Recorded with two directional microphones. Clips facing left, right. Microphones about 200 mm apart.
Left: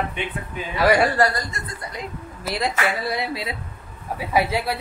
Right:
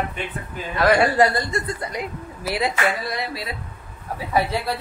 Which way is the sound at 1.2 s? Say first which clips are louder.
Right 3 dB; 25° right (ahead or behind).